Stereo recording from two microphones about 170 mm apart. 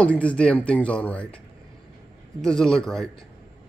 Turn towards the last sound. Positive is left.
turn(degrees=5)  # may be behind; listen again after turning